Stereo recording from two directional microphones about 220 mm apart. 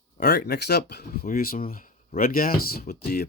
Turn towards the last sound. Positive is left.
turn(degrees=45)  # may be behind; listen again after turning